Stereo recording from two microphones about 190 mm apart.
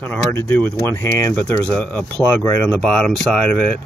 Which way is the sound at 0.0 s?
10° left (ahead or behind).